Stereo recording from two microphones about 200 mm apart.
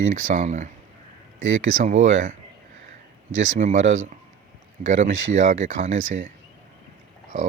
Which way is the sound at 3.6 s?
35° right (ahead or behind).